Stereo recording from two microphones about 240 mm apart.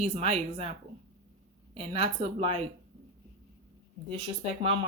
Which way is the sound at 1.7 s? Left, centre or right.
Right.